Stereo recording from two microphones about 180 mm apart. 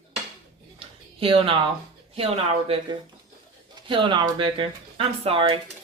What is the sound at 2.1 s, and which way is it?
Speech, 30° right (ahead or behind).